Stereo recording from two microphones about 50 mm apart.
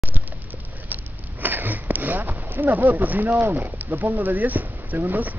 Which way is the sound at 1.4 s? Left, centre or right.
Right.